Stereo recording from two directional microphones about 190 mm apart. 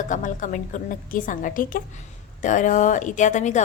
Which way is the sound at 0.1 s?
40° left (ahead or behind).